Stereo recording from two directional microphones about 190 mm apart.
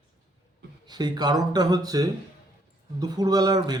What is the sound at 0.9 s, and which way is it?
A man's voice, 20° right (ahead or behind).